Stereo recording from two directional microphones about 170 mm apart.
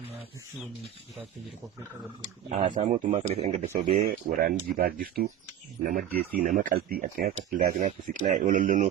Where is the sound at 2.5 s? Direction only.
40° right (ahead or behind).